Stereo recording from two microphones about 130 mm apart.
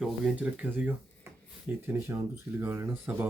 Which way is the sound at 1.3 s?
20° right (ahead or behind).